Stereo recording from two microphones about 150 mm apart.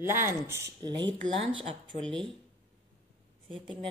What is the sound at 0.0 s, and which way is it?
Speech, 15° right (ahead or behind).